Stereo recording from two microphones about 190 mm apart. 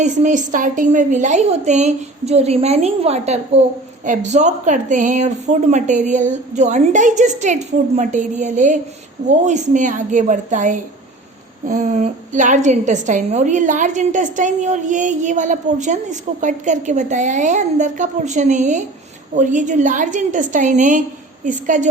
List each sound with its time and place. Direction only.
0.0 s a woman's voice: 40° right (ahead or behind)